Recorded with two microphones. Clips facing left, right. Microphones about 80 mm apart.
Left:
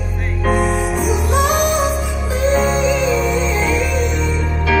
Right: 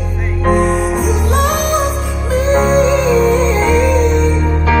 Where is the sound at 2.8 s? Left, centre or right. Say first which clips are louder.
Right 5 dB; right.